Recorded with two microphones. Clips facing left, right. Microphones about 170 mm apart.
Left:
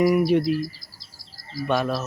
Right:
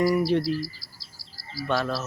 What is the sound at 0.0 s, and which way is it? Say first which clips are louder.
Speech: left 3 dB; 15° left (ahead or behind).